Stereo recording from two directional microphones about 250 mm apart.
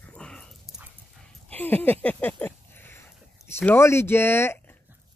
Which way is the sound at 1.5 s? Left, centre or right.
Centre.